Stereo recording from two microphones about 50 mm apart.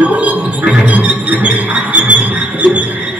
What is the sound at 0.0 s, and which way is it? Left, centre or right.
Music, right.